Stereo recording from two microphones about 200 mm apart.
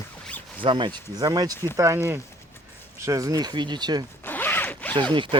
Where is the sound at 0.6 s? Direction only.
25° right (ahead or behind).